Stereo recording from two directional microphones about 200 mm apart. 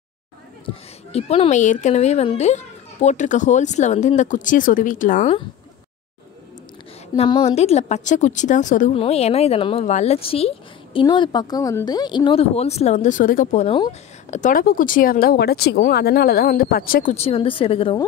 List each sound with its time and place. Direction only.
1.1 s speech: 30° left (ahead or behind)
7.2 s speech: 25° left (ahead or behind); by 17.1 s 45° left (ahead or behind)
17.1 s speech: 30° left (ahead or behind)